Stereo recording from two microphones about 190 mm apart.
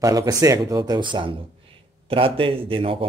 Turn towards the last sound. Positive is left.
turn(degrees=-30)  # may be behind; listen again after turning